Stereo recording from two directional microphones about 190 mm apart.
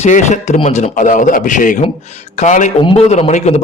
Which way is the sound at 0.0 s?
40° left (ahead or behind).